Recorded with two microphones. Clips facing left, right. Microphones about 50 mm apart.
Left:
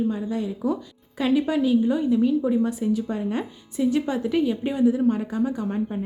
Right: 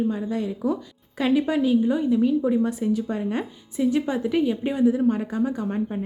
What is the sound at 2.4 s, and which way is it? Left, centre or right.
A woman's voice, right.